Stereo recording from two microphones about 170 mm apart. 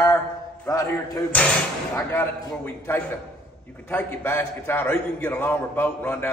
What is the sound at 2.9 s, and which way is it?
A man's voice, 15° left (ahead or behind).